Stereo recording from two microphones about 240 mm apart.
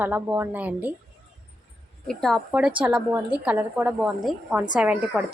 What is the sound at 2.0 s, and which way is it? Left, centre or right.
A woman's voice, centre.